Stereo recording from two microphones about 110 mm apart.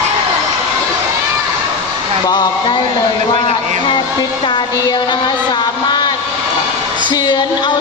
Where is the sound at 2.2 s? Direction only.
40° left (ahead or behind).